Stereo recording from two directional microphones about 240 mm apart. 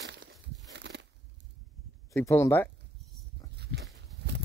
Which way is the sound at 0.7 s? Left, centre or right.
Right.